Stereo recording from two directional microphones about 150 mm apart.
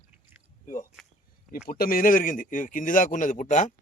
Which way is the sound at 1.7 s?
75° left (ahead or behind).